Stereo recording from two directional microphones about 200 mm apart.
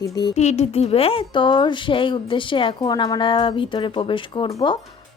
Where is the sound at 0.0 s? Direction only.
20° left (ahead or behind).